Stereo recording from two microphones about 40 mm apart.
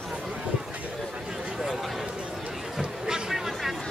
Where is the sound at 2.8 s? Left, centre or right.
Centre.